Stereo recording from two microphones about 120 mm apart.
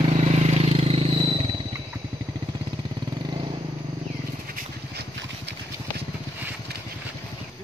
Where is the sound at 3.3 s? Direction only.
40° right (ahead or behind).